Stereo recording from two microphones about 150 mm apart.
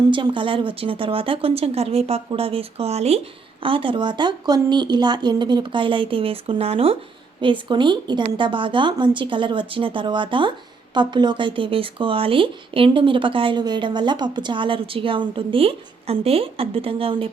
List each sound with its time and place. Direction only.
0.1 s speech: 35° right (ahead or behind)